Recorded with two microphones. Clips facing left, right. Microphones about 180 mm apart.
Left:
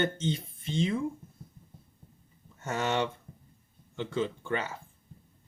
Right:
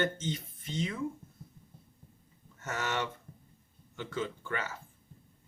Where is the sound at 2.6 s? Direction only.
30° left (ahead or behind).